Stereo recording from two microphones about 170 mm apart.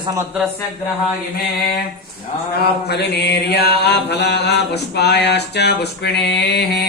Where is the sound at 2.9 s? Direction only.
75° left (ahead or behind).